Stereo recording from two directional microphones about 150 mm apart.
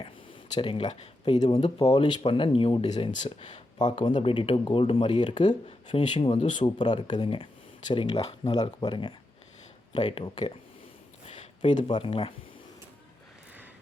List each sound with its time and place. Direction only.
0.5 s speech: 35° left (ahead or behind)
8.5 s speech: 25° left (ahead or behind)
10.0 s speech: 40° left (ahead or behind)
11.9 s speech: 35° left (ahead or behind)